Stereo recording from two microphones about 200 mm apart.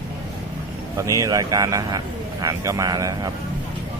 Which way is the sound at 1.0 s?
15° right (ahead or behind).